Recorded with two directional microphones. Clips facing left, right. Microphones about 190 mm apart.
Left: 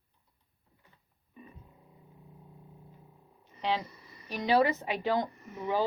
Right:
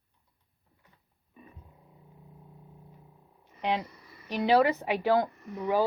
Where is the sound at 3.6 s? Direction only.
15° right (ahead or behind).